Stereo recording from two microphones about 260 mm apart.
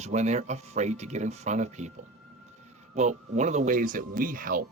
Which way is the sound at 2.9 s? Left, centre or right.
Right.